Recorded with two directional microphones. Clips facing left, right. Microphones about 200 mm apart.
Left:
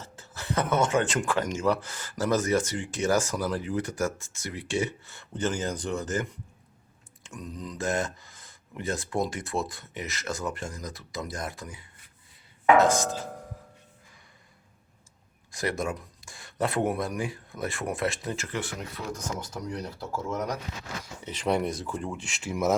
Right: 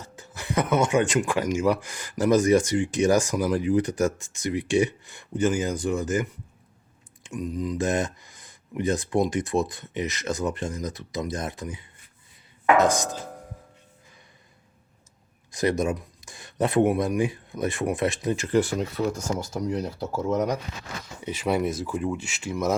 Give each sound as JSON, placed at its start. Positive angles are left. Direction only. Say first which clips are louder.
{"t": 0.0, "sound": "speech", "louder": "right 2 dB", "side_deg": -15}
{"t": 15.5, "sound": "speech", "louder": "right 6 dB", "side_deg": -20}
{"t": 18.5, "sound": "speech", "louder": "right 11 dB", "side_deg": -35}
{"t": 21.2, "sound": "speech", "louder": "right 2 dB", "side_deg": -5}